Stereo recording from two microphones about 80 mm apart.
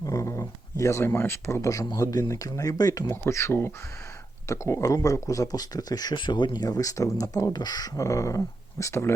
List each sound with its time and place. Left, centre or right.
0.0 s a sound: left
2.0 s speech: left
3.1 s speech: left
7.5 s speech: left
7.9 s speech: left